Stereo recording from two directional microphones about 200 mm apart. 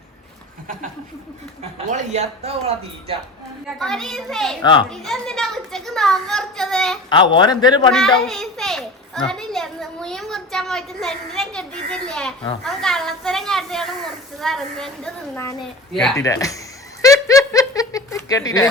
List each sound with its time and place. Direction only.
1.9 s speech: 35° right (ahead or behind)
3.8 s a child's voice: centre (ahead or behind)
4.6 s a man's voice: 20° left (ahead or behind)
4.9 s a child's voice: 5° left (ahead or behind)
7.1 s a man's voice: 20° left (ahead or behind)
7.9 s a child's voice: 5° left (ahead or behind)
16.1 s speech: 15° left (ahead or behind)
17.0 s giggle: 15° left (ahead or behind)